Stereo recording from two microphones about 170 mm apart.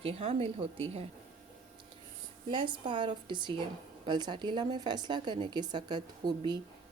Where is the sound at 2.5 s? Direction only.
30° right (ahead or behind).